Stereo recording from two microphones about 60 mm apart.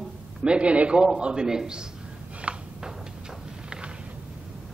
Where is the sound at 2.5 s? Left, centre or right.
Centre.